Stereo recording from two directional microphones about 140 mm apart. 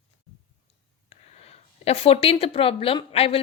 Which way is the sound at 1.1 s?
45° left (ahead or behind).